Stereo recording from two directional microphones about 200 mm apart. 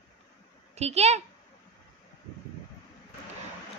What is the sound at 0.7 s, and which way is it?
Speech, 30° right (ahead or behind).